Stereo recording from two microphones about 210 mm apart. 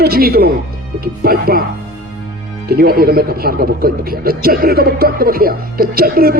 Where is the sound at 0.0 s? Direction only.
45° right (ahead or behind).